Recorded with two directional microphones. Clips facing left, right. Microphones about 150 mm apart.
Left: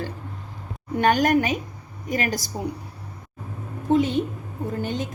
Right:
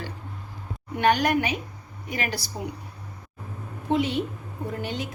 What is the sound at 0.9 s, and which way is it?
A woman's voice, 45° left (ahead or behind).